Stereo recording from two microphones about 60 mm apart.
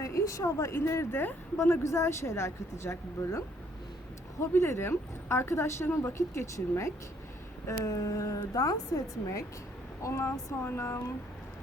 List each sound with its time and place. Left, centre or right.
0.0 s a woman's voice: left
0.8 s speech: left
6.0 s speech: left
7.7 s a woman's voice: left
10.0 s speech: left